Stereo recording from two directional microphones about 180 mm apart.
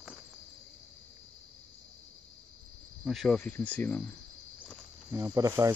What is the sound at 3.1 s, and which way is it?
Speech, centre (ahead or behind).